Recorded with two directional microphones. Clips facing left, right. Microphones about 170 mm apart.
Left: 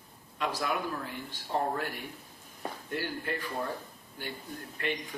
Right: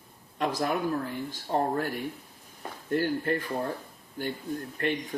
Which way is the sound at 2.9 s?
50° right (ahead or behind).